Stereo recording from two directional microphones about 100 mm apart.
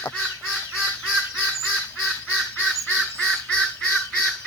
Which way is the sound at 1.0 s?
5° right (ahead or behind).